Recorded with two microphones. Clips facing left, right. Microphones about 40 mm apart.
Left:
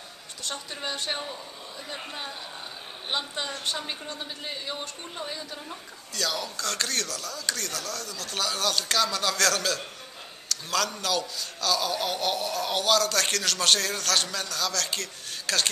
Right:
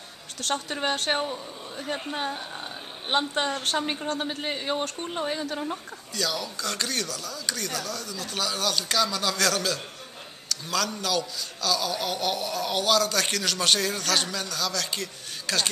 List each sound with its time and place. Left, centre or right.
0.4 s a woman's voice: right
0.9 s a man's voice: right
2.0 s a man's voice: right
3.8 s speech: right
4.1 s a man's voice: right
6.1 s a man's voice: centre